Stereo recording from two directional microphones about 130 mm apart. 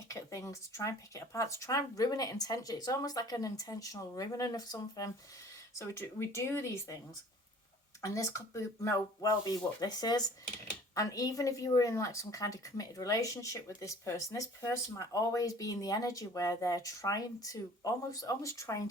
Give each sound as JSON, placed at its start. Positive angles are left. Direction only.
{"t": 0.1, "sound": "a woman's voice", "side_deg": 25}
{"t": 8.0, "sound": "a woman's voice", "side_deg": 25}